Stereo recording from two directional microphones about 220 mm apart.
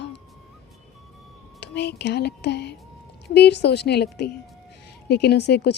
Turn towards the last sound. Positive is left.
turn(degrees=50)  # may be behind; listen again after turning